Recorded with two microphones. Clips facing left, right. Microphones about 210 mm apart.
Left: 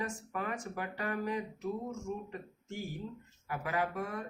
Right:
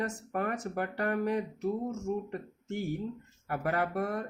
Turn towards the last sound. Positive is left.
turn(degrees=-60)  # may be behind; listen again after turning